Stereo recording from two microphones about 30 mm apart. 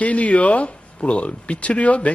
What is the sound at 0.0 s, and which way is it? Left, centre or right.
Speech, left.